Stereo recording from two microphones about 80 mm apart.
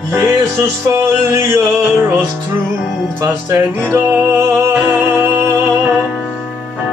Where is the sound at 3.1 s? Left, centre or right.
Right.